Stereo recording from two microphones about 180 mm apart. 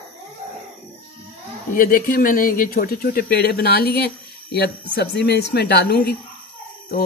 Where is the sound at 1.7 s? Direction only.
55° left (ahead or behind).